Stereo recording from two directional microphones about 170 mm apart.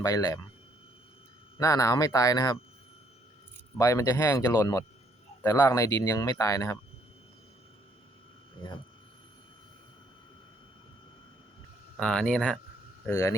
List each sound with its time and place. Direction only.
0.0 s speech: 20° left (ahead or behind)
1.5 s speech: 20° left (ahead or behind)
3.8 s speech: 20° left (ahead or behind)
11.9 s speech: 5° left (ahead or behind)
13.1 s speech: 15° left (ahead or behind)